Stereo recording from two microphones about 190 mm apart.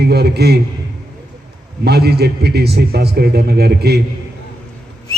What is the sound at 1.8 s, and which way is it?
A man's voice, 60° right (ahead or behind).